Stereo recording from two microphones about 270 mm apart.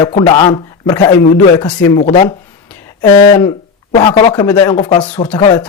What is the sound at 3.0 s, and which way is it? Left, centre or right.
Speech, centre.